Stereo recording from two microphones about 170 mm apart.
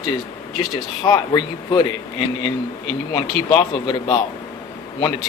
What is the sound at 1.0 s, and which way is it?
Speech, 25° left (ahead or behind).